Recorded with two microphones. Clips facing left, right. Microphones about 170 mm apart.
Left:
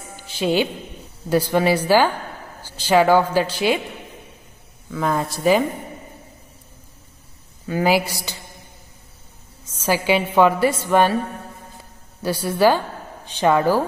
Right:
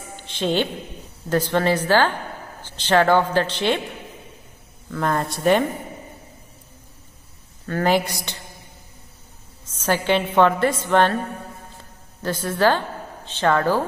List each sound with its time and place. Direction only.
0.1 s music: 10° left (ahead or behind)
1.3 s a woman's voice: 10° left (ahead or behind)
4.9 s speech: 5° left (ahead or behind)
7.6 s a woman's voice: 10° left (ahead or behind)
9.7 s a woman's voice: 10° left (ahead or behind)
12.2 s a woman's voice: 10° left (ahead or behind)